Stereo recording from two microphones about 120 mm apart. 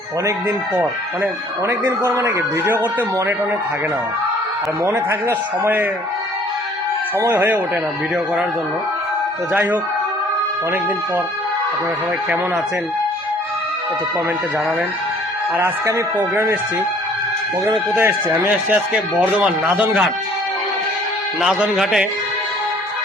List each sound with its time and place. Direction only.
0.8 s speech: 20° right (ahead or behind)
7.2 s speech: 20° right (ahead or behind)
15.5 s speech: 20° right (ahead or behind)
17.9 s speech: 20° right (ahead or behind)
21.4 s a man's voice: 5° right (ahead or behind)